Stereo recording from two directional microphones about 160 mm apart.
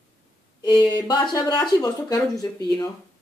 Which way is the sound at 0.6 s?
25° left (ahead or behind).